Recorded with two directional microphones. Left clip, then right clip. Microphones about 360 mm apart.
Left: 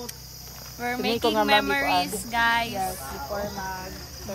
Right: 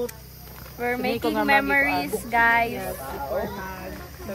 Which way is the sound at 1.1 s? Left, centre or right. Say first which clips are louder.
Left 5 dB; left.